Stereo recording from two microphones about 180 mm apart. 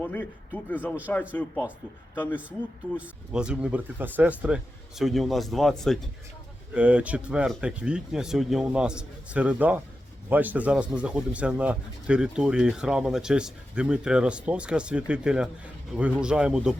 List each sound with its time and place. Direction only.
0.0 s speech: 10° left (ahead or behind)
3.0 s speech: 5° right (ahead or behind)